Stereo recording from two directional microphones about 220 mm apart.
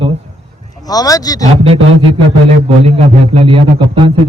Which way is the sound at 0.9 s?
15° left (ahead or behind).